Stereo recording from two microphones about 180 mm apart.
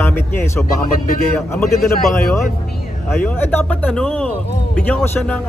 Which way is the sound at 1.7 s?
55° left (ahead or behind).